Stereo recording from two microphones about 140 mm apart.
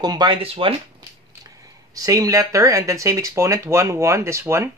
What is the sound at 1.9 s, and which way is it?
Speech, 25° right (ahead or behind).